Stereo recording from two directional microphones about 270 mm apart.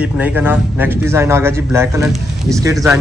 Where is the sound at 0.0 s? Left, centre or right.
Centre.